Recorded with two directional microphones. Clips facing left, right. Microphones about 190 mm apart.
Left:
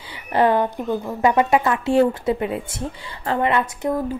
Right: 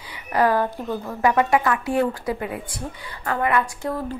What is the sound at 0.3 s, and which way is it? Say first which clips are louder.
A woman's voice: left 2 dB; 25° left (ahead or behind).